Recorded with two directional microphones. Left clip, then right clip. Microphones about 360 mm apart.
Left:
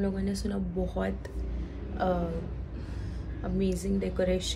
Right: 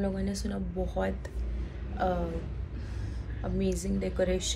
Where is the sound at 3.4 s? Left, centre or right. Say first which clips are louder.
Left 1 dB; centre.